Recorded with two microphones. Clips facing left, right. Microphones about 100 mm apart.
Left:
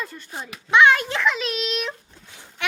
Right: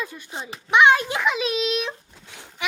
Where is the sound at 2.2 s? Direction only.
90° right.